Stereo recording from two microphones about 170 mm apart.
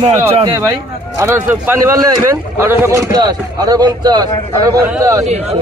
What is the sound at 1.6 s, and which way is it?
A man's voice, 20° right (ahead or behind).